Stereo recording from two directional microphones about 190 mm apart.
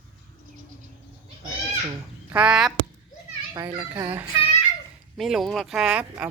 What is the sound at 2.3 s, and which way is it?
Speech, 5° right (ahead or behind).